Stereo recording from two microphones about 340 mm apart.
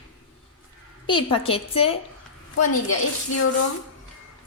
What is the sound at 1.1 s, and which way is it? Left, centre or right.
Speech, centre.